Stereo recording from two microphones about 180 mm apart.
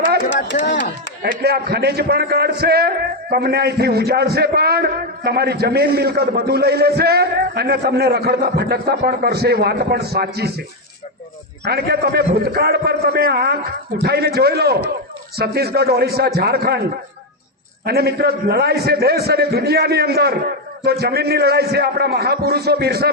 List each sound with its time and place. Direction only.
0.5 s chop: 40° left (ahead or behind)
1.2 s a man's voice: 60° right (ahead or behind)
11.6 s a man's voice: 60° right (ahead or behind)
17.8 s a man's voice: 60° right (ahead or behind)